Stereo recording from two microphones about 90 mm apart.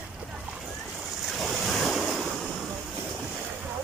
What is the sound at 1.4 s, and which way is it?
Waves, centre (ahead or behind).